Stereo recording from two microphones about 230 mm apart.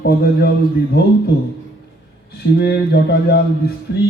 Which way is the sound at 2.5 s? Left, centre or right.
Left.